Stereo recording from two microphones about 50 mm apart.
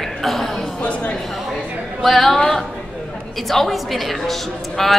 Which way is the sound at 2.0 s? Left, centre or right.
Centre.